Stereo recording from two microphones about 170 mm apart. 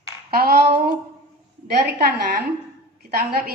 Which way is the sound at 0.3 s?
65° right (ahead or behind).